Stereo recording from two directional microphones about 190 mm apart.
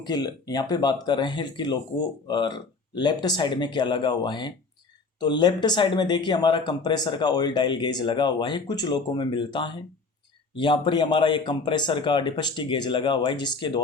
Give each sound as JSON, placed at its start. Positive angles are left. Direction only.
{"t": 0.0, "sound": "speech", "side_deg": 20}